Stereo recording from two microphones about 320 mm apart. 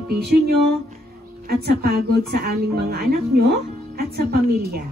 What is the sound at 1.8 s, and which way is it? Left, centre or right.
Speech, right.